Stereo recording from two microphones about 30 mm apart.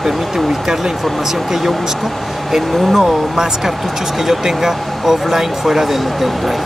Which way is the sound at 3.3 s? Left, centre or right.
Centre.